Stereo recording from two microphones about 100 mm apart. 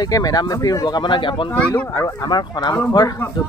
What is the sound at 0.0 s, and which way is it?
Speech, 40° left (ahead or behind).